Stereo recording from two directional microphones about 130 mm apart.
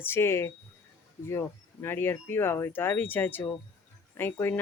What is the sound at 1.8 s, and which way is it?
Speech, 20° left (ahead or behind).